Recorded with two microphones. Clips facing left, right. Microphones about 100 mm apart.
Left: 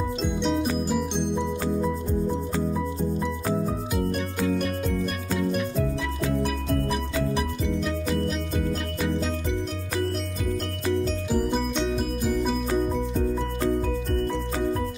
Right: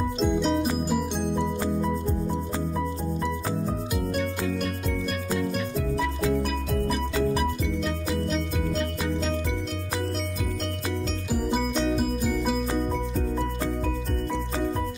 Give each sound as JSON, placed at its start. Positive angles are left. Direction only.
{"t": 0.2, "sound": "music", "side_deg": 0}
{"t": 7.8, "sound": "music", "side_deg": 5}
{"t": 11.3, "sound": "music", "side_deg": -5}